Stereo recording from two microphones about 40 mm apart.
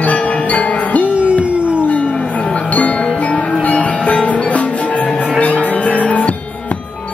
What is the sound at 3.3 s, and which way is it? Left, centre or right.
Music, left.